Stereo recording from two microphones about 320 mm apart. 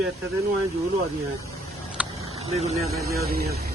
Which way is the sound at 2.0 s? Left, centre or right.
Centre.